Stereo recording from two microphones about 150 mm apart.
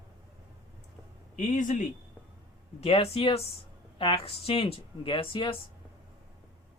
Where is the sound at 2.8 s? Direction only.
40° left (ahead or behind).